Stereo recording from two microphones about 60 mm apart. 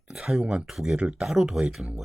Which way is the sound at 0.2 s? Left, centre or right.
Centre.